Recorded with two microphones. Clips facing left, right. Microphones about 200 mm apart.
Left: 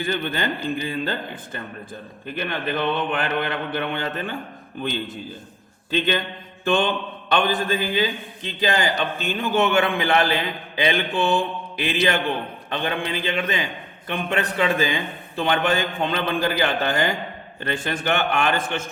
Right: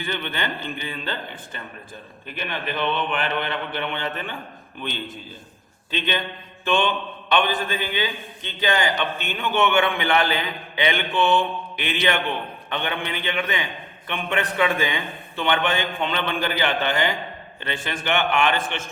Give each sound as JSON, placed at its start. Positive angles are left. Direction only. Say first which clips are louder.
{"t": 0.0, "sound": "a man's voice", "louder": "left 4 dB", "side_deg": 40}
{"t": 6.7, "sound": "a man's voice", "louder": "left 1 dB", "side_deg": 40}